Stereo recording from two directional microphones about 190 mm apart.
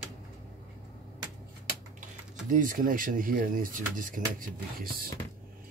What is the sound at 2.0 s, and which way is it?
Speech, 45° right (ahead or behind).